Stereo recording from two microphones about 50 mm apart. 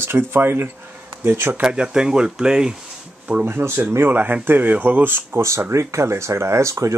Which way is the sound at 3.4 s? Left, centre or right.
Right.